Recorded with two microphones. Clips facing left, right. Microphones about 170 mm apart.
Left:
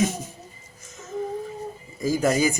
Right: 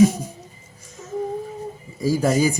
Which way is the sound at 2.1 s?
35° right (ahead or behind).